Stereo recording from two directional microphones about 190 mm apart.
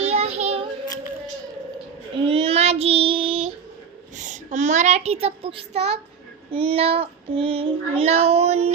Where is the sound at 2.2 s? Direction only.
30° right (ahead or behind).